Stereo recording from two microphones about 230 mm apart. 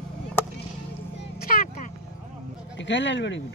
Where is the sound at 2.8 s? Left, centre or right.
Left.